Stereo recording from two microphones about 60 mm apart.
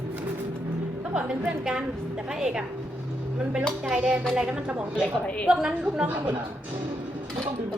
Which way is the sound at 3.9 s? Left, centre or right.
Centre.